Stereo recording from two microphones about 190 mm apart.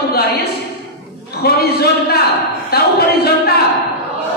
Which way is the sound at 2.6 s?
55° left (ahead or behind).